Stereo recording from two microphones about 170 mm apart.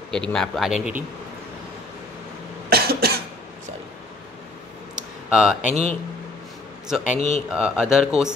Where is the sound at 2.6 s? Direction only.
65° right (ahead or behind).